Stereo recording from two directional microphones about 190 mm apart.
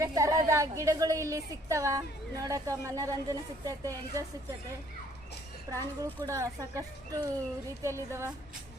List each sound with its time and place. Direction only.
0.0 s a woman's voice: 20° right (ahead or behind)
5.7 s a woman's voice: 15° right (ahead or behind)